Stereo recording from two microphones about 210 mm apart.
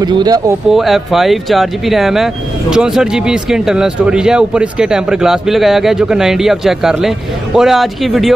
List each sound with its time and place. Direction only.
0.0 s speech: 20° right (ahead or behind)
0.7 s speech: centre (ahead or behind)